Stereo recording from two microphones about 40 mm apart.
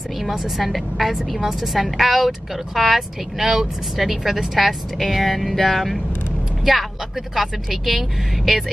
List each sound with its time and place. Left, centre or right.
0.2 s speech: centre